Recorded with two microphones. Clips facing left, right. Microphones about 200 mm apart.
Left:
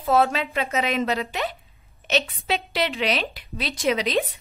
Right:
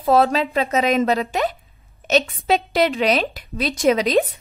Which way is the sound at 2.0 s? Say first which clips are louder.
Right 6 dB; 45° right (ahead or behind).